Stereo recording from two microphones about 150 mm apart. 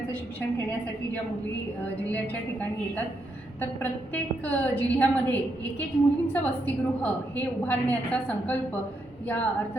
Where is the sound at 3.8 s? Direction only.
10° left (ahead or behind).